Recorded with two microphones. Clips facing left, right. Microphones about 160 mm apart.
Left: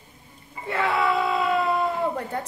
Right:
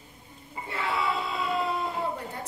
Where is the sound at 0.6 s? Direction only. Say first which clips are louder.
Left 6 dB; 65° left (ahead or behind).